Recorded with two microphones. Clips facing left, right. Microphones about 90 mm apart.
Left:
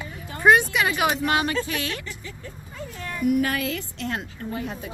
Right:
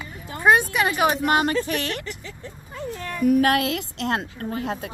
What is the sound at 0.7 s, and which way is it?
Speech, 35° right (ahead or behind).